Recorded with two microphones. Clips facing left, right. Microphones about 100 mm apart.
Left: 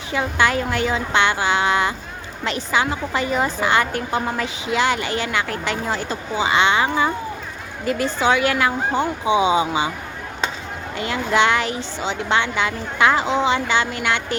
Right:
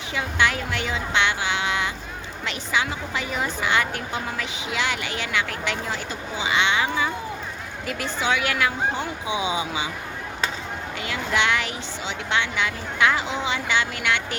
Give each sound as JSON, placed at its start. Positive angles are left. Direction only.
{"t": 0.1, "sound": "a woman's voice", "side_deg": 40}
{"t": 10.9, "sound": "a woman's voice", "side_deg": 35}